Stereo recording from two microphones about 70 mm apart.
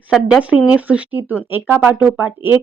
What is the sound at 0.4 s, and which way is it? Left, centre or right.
A woman's voice, centre.